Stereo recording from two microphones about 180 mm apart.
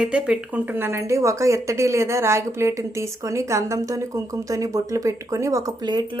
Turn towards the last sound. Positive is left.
turn(degrees=-25)  # may be behind; listen again after turning